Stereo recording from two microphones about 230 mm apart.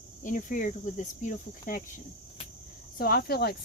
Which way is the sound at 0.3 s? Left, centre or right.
Left.